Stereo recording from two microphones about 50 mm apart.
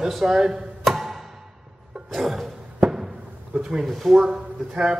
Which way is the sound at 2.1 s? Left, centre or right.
Centre.